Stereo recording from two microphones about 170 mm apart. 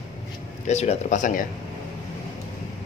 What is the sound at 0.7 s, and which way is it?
Speech, 40° left (ahead or behind).